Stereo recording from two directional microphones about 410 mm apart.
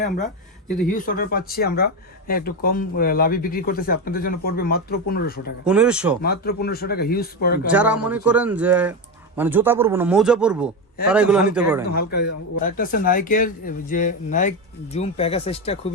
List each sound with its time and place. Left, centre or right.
0.9 s speech: centre
5.6 s speech: centre
6.2 s speech: left
7.7 s speech: centre
11.9 s speech: left